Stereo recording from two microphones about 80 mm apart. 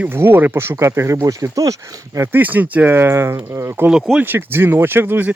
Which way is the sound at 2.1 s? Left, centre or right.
Right.